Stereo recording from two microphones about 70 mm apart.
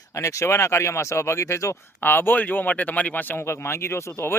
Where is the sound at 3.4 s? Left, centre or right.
Left.